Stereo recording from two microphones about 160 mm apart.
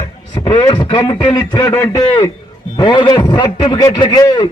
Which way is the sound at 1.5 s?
15° left (ahead or behind).